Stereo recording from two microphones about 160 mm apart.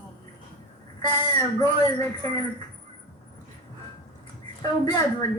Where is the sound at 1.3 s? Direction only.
25° left (ahead or behind).